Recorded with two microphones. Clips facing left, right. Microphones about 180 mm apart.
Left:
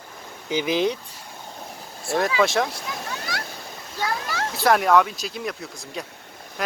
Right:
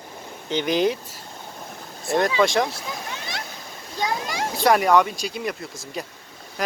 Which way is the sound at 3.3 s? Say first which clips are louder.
Left 2 dB; 20° right (ahead or behind).